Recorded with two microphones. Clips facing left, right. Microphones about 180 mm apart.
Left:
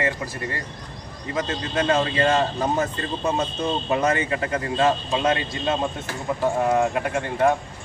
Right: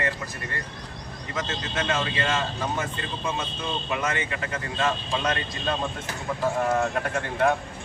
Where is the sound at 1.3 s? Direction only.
30° left (ahead or behind); by 7.5 s 5° left (ahead or behind).